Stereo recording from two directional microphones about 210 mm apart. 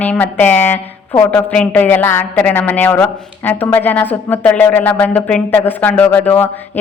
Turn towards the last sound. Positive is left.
turn(degrees=10)  # may be behind; listen again after turning